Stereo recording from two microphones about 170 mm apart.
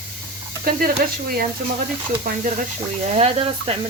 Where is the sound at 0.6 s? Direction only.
60° right (ahead or behind).